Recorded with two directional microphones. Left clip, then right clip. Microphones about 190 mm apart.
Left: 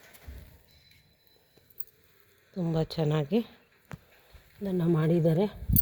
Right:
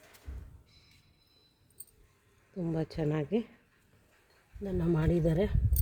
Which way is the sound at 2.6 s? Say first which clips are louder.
Left 4 dB; 5° left (ahead or behind).